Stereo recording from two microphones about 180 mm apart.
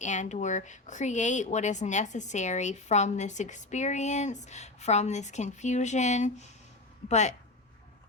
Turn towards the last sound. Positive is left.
turn(degrees=40)  # may be behind; listen again after turning